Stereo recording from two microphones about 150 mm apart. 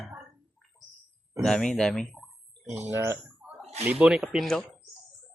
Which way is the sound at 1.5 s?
5° left (ahead or behind).